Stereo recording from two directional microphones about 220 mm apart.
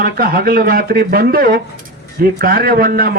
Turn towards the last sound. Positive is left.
turn(degrees=-45)  # may be behind; listen again after turning